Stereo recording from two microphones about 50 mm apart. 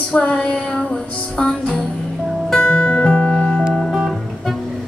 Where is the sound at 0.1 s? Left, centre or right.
Left.